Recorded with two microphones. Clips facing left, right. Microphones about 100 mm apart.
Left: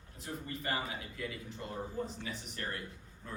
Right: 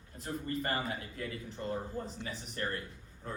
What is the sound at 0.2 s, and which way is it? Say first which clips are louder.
Speech: right 5 dB; 45° right (ahead or behind).